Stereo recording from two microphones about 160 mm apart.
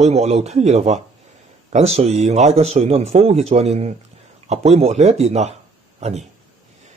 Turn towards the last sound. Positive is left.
turn(degrees=-45)  # may be behind; listen again after turning